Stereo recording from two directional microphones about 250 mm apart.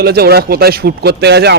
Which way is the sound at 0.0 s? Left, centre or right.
Right.